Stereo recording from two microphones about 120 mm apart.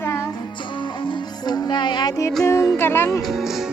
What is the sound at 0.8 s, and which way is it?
Music, 40° left (ahead or behind).